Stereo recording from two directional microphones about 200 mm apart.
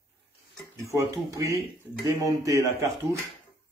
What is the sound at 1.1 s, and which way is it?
A man's voice, 15° right (ahead or behind).